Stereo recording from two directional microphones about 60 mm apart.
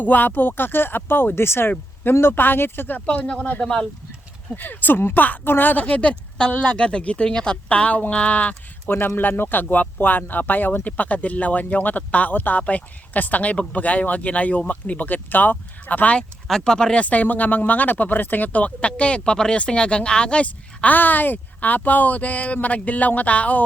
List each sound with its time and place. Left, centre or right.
0.0 s speech: left
3.1 s speech: left
3.6 s speech: centre
4.5 s speech: left
8.9 s speech: left
16.5 s speech: centre